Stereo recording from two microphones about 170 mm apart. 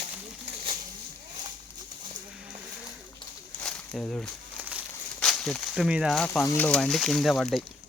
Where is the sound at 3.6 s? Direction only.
5° left (ahead or behind).